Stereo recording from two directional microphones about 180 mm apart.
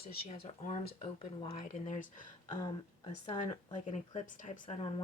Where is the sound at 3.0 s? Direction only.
30° left (ahead or behind).